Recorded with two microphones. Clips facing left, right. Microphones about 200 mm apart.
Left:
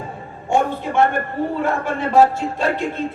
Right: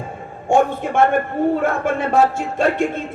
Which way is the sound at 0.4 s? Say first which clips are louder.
Right 3 dB; 50° right (ahead or behind).